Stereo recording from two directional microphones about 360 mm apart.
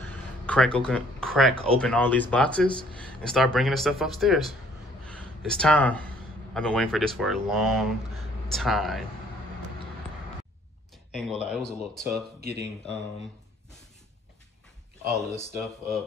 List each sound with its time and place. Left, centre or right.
0.0 s a sound: centre
1.8 s speech: centre
11.1 s a sound: centre
11.4 s speech: centre
12.4 s speech: right
15.1 s speech: centre